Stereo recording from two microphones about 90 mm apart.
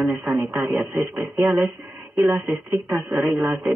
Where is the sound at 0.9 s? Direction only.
20° right (ahead or behind).